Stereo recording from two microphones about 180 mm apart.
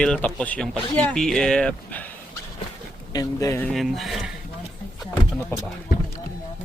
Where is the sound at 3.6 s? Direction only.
Centre (ahead or behind).